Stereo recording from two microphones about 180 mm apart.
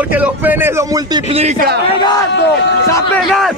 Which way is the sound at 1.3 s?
35° right (ahead or behind).